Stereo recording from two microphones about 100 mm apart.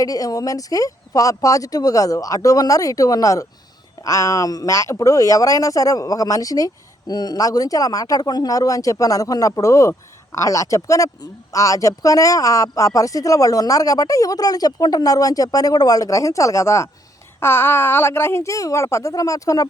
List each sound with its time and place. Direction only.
0.0 s speech: 35° left (ahead or behind)